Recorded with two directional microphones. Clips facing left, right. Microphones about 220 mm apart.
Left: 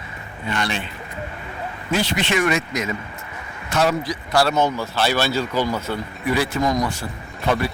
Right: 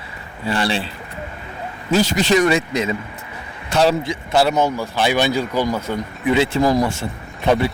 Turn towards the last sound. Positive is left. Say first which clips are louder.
# right 4 dB
turn(degrees=-25)  # may be behind; listen again after turning